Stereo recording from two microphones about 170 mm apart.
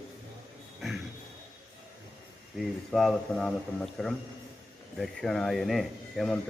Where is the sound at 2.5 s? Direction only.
Centre (ahead or behind).